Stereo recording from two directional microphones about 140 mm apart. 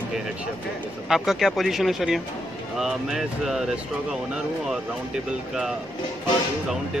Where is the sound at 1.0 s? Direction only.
Centre (ahead or behind).